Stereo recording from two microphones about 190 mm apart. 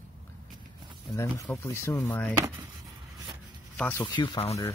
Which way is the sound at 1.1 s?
15° left (ahead or behind).